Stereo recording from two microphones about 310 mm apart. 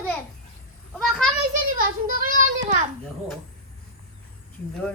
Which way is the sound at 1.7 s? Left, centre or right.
Right.